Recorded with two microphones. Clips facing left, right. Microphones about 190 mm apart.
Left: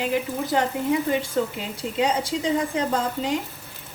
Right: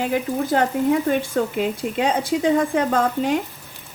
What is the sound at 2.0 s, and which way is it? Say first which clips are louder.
A woman's voice: right 2 dB; 55° right (ahead or behind).